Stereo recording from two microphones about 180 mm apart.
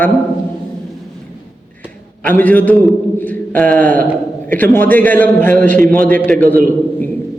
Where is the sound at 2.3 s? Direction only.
10° left (ahead or behind).